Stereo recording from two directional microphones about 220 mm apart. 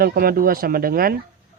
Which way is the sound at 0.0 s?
45° right (ahead or behind).